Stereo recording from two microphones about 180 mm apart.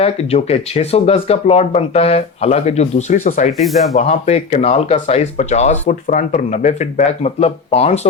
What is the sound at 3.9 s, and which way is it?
Speech, 40° left (ahead or behind).